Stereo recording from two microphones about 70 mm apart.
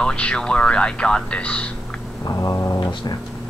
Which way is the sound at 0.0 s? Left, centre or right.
Centre.